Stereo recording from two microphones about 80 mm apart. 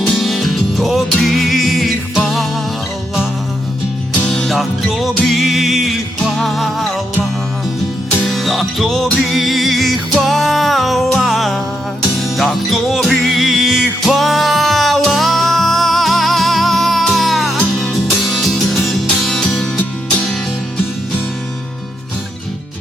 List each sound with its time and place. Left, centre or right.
0.2 s music: centre
4.3 s music: centre
8.2 s music: centre